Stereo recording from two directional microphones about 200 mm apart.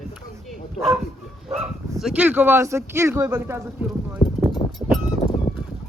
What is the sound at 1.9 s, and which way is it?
Speech, 5° right (ahead or behind).